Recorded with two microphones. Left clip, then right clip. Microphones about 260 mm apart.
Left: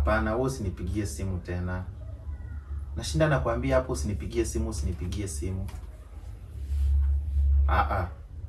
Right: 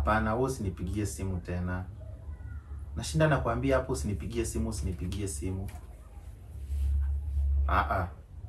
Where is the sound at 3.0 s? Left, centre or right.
Centre.